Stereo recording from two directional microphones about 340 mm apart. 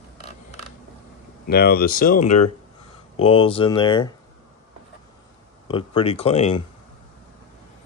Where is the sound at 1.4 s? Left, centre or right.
Left.